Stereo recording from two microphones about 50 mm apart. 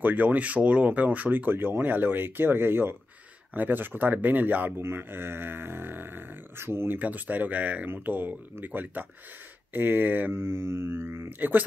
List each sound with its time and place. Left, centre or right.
0.0 s speech: right
4.8 s speech: right
7.0 s speech: right
10.3 s mantra: right
11.2 s speech: right